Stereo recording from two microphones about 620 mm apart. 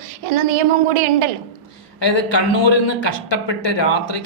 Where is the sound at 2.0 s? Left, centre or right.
Left.